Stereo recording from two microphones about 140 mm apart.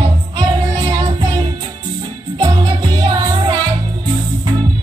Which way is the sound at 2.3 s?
25° right (ahead or behind).